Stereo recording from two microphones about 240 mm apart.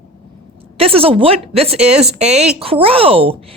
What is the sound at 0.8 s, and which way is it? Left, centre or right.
A woman's voice, right.